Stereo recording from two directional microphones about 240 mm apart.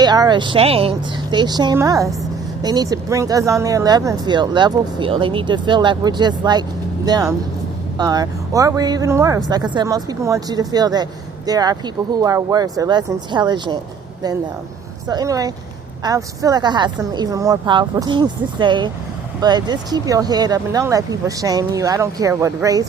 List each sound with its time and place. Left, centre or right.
0.0 s speech: centre
15.0 s speech: centre